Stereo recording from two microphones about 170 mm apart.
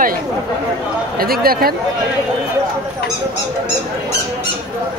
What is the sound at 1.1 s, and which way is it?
Speech, 60° right (ahead or behind).